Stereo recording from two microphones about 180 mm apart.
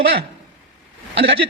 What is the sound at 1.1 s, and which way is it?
Speech, 70° right (ahead or behind).